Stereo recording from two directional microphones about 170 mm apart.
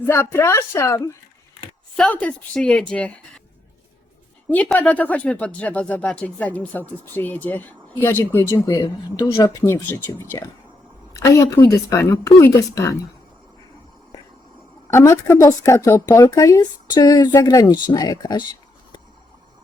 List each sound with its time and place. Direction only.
0.0 s speech: 15° left (ahead or behind)
4.4 s speech: 10° left (ahead or behind)
14.8 s a woman's voice: 15° left (ahead or behind)